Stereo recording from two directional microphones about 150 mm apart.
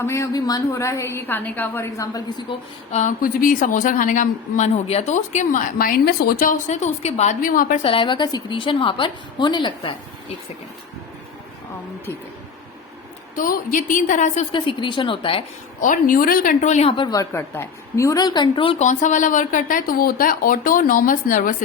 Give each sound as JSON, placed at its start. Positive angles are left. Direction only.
{"t": 0.0, "sound": "a woman's voice", "side_deg": 20}
{"t": 2.5, "sound": "a sound", "side_deg": 50}
{"t": 3.2, "sound": "speech", "side_deg": 70}
{"t": 7.8, "sound": "a woman's voice", "side_deg": 35}
{"t": 13.3, "sound": "speech", "side_deg": 65}
{"t": 14.5, "sound": "a woman's voice", "side_deg": 35}
{"t": 15.8, "sound": "speech", "side_deg": 60}
{"t": 17.0, "sound": "a woman's voice", "side_deg": 25}
{"t": 18.8, "sound": "speech", "side_deg": 55}